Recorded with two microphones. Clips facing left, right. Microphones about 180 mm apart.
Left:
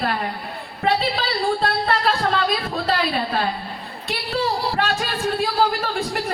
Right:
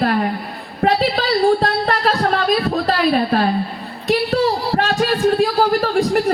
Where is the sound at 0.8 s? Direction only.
45° right (ahead or behind).